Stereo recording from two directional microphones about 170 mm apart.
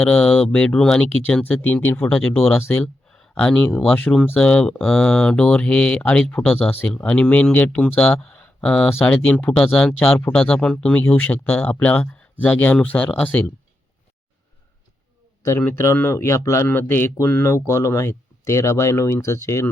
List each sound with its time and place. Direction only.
0.0 s speech: 10° left (ahead or behind)
15.4 s speech: 15° left (ahead or behind)